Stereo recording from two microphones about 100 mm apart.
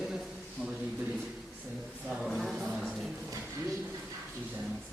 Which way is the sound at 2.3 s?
Centre (ahead or behind).